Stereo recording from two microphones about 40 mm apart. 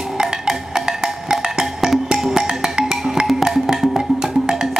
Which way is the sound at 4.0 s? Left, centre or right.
Centre.